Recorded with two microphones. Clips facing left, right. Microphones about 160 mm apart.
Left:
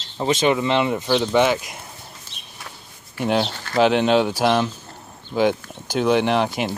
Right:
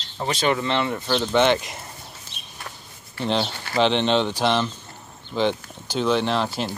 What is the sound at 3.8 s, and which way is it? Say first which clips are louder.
Speech: left 3 dB; 10° left (ahead or behind).